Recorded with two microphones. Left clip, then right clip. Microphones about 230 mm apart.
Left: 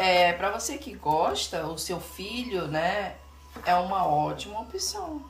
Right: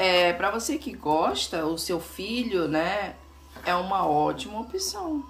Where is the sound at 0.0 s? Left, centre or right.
Centre.